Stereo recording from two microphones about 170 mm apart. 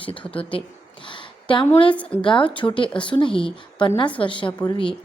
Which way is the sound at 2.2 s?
30° left (ahead or behind).